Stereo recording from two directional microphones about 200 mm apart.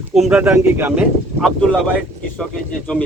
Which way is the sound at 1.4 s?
5° left (ahead or behind).